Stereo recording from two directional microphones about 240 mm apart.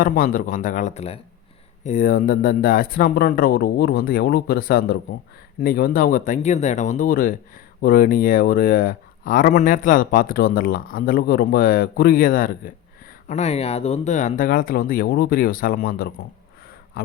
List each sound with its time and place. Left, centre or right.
0.0 s speech: left